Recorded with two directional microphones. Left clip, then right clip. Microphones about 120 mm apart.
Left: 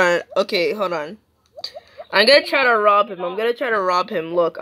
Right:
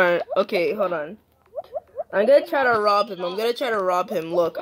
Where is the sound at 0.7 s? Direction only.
15° left (ahead or behind).